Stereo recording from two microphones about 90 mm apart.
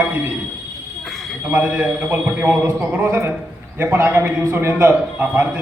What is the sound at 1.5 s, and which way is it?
A man's voice, 15° right (ahead or behind).